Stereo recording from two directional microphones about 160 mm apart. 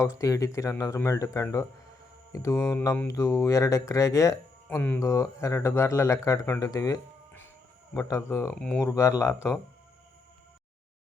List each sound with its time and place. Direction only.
0.2 s speech: 20° left (ahead or behind)